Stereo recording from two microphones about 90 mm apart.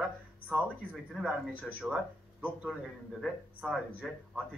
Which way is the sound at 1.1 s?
10° right (ahead or behind).